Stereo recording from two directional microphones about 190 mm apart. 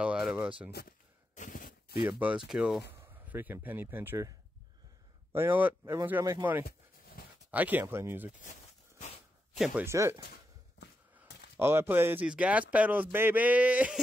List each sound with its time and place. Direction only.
0.0 s speech: 5° right (ahead or behind)
0.7 s speech: 55° left (ahead or behind)
1.3 s a sound: 45° left (ahead or behind)
2.0 s speech: 10° right (ahead or behind)
8.5 s a sound: 40° left (ahead or behind)
9.6 s speech: 10° right (ahead or behind)
11.5 s speech: 10° right (ahead or behind)